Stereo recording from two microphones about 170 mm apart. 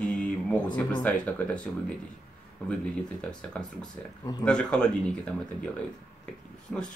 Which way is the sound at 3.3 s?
5° left (ahead or behind).